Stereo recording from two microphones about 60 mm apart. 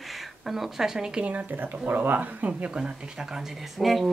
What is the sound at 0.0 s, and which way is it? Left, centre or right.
Speech, centre.